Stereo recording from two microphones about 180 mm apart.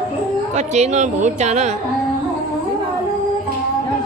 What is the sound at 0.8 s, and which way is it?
Speech, 40° right (ahead or behind).